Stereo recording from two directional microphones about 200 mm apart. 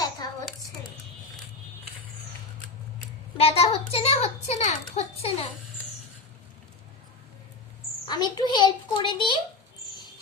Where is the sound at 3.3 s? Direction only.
30° left (ahead or behind).